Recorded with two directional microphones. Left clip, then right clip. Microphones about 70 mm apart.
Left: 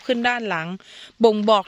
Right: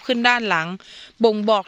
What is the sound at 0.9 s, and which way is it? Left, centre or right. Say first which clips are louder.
Speech: left 2 dB; left.